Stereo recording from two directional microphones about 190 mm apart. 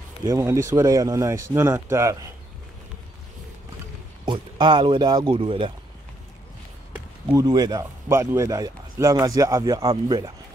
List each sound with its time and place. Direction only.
0.2 s speech: 15° right (ahead or behind)
4.3 s a man's voice: 25° right (ahead or behind)
6.9 s a man's voice: 20° right (ahead or behind)